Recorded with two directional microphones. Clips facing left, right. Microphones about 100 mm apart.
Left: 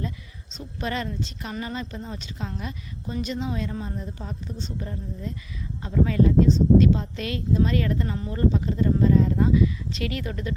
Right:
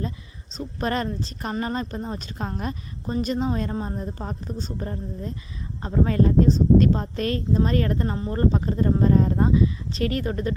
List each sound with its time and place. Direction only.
0.5 s a woman's voice: 45° right (ahead or behind)